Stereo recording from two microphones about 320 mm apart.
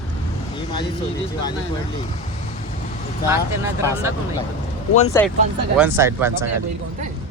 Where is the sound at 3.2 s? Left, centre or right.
Centre.